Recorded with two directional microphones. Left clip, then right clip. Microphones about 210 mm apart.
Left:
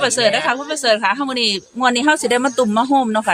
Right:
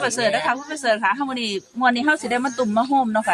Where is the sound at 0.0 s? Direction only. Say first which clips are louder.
Left 5 dB; 40° left (ahead or behind).